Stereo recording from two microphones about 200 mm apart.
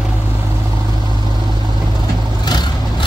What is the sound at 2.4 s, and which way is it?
Vehicle, 20° left (ahead or behind).